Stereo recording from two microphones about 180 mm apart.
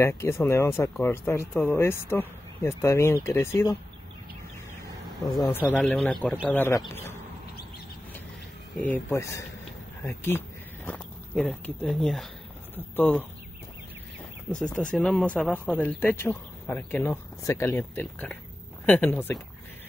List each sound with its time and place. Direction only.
0.0 s speech: 15° left (ahead or behind)
4.8 s a sound: 20° left (ahead or behind)
5.8 s speech: 5° left (ahead or behind)
8.8 s speech: 15° left (ahead or behind)
14.5 s speech: 5° left (ahead or behind)